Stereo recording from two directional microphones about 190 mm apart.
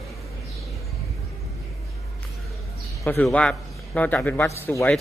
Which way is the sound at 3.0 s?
10° left (ahead or behind).